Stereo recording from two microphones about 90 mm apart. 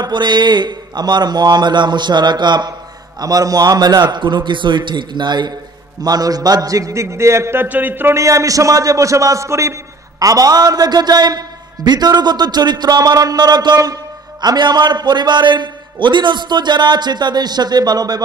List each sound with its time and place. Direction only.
0.0 s a man's voice: 55° right (ahead or behind)
3.2 s a man's voice: 45° right (ahead or behind)
6.0 s a man's voice: 45° right (ahead or behind)
7.6 s speech: 20° right (ahead or behind)
8.2 s a man's voice: 35° right (ahead or behind)